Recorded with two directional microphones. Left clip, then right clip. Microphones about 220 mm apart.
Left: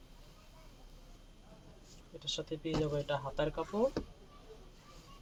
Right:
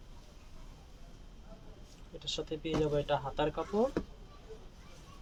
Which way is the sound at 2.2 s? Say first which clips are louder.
Right 2 dB; 30° right (ahead or behind).